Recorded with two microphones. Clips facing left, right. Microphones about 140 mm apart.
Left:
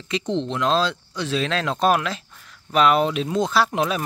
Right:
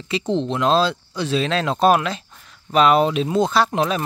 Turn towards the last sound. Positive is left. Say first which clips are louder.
# right 2 dB
turn(degrees=5)  # may be behind; listen again after turning